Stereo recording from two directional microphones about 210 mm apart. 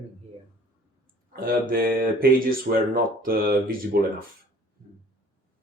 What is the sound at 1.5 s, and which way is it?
Speech, 45° right (ahead or behind).